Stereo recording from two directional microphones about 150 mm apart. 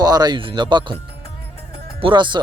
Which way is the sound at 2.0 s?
35° right (ahead or behind).